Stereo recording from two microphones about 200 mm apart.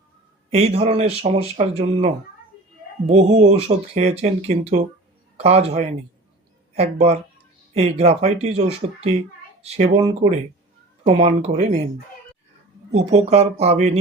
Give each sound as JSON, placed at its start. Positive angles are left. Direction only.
{"t": 0.5, "sound": "speech", "side_deg": -30}
{"t": 12.9, "sound": "speech", "side_deg": -30}